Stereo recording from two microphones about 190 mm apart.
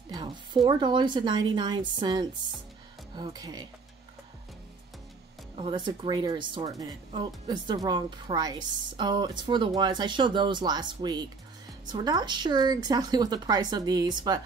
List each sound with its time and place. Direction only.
0.1 s speech: 20° right (ahead or behind)
5.6 s speech: 25° right (ahead or behind)